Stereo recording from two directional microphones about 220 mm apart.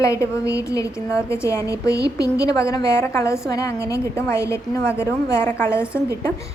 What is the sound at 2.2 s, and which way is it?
Speech, 45° right (ahead or behind).